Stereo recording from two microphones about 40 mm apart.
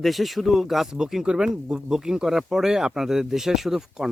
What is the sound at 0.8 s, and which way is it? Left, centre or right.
Speech, centre.